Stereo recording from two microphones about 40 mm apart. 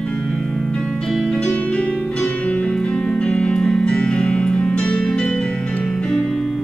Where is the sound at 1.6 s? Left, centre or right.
Left.